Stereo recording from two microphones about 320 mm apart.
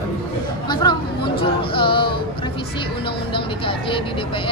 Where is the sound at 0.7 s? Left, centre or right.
Centre.